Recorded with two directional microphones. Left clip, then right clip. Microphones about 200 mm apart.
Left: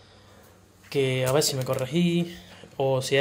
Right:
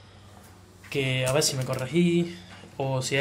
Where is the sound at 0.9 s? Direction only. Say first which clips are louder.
Left 2 dB; 20° left (ahead or behind).